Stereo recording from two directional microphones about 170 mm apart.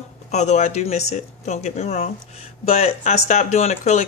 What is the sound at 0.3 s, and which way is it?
Speech, 40° left (ahead or behind).